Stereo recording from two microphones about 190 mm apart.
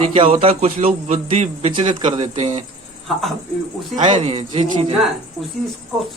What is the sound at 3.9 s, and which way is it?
A man's voice, 40° right (ahead or behind).